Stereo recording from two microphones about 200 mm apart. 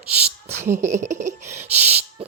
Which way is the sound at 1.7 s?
35° right (ahead or behind).